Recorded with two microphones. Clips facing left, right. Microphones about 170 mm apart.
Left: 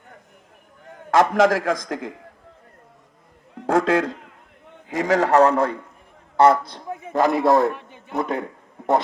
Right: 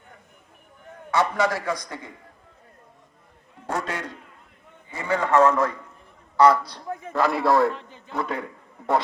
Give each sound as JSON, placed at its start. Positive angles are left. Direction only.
{"t": 1.1, "sound": "a man's voice", "side_deg": 90}
{"t": 3.5, "sound": "a man's voice", "side_deg": 80}
{"t": 5.3, "sound": "a man's voice", "side_deg": 35}
{"t": 6.3, "sound": "a man's voice", "side_deg": 50}
{"t": 6.7, "sound": "a man's voice", "side_deg": 20}